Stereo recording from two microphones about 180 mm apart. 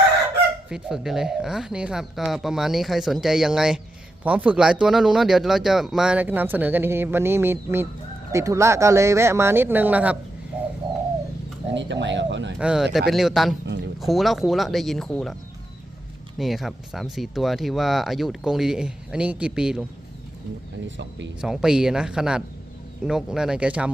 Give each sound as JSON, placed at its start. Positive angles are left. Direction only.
{"t": 0.7, "sound": "speech", "side_deg": 0}
{"t": 11.7, "sound": "speech", "side_deg": -85}
{"t": 12.5, "sound": "speech", "side_deg": -5}
{"t": 16.4, "sound": "speech", "side_deg": 0}
{"t": 20.8, "sound": "speech", "side_deg": -85}
{"t": 21.4, "sound": "speech", "side_deg": -5}